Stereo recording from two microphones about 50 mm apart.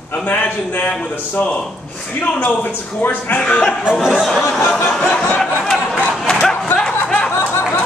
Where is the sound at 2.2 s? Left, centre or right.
Left.